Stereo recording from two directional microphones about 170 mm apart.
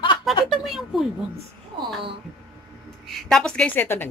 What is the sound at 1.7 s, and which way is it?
Speech, 30° right (ahead or behind).